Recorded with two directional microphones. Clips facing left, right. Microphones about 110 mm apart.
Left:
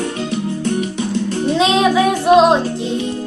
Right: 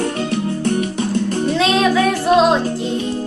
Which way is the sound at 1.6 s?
20° left (ahead or behind).